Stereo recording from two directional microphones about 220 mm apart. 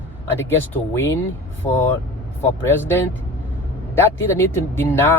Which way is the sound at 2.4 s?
10° left (ahead or behind).